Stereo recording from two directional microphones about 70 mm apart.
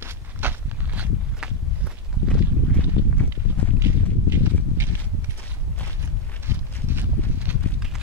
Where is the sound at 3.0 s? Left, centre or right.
Right.